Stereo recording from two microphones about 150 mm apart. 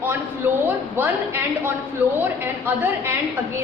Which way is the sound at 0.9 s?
15° right (ahead or behind).